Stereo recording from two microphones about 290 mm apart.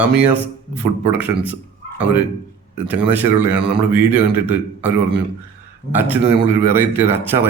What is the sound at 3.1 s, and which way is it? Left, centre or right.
A man's voice, centre.